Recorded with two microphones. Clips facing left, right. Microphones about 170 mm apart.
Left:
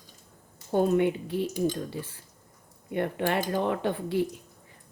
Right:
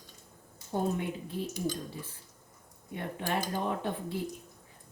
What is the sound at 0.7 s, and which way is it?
Speech, 75° left (ahead or behind).